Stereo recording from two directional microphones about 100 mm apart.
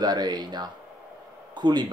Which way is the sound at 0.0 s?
45° right (ahead or behind).